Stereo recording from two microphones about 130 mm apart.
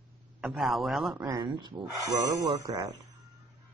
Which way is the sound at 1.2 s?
35° right (ahead or behind).